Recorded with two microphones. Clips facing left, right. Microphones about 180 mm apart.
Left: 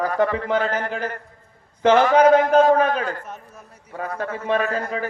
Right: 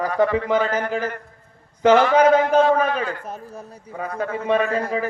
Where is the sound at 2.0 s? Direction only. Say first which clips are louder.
Left 1 dB; 45° left (ahead or behind).